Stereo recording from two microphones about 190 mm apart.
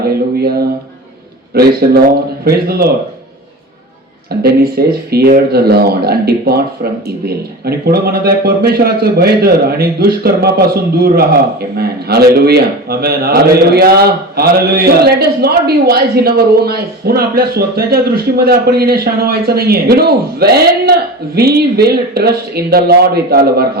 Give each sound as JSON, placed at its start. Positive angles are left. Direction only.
{"t": 1.5, "sound": "a man's voice", "side_deg": -55}
{"t": 4.4, "sound": "a man's voice", "side_deg": -55}